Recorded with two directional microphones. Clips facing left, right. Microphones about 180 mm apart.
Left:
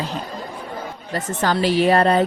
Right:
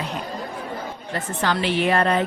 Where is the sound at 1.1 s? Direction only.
40° left (ahead or behind).